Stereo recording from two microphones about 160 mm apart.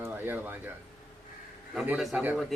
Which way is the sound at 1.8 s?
Centre (ahead or behind).